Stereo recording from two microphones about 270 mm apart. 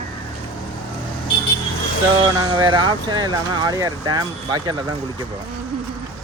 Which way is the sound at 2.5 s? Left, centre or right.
Centre.